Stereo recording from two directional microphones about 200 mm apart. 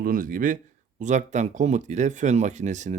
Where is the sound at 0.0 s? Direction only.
45° right (ahead or behind).